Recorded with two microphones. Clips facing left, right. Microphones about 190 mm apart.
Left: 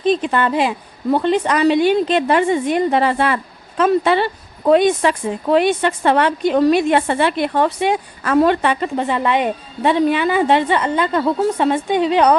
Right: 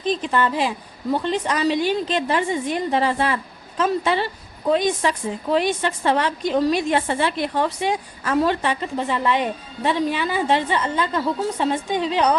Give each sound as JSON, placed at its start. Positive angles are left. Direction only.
{"t": 0.1, "sound": "a woman's voice", "side_deg": 65}